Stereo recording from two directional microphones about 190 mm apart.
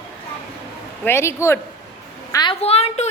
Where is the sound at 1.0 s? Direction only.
15° left (ahead or behind).